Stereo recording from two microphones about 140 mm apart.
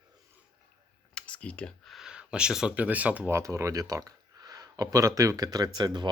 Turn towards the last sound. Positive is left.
turn(degrees=-30)  # may be behind; listen again after turning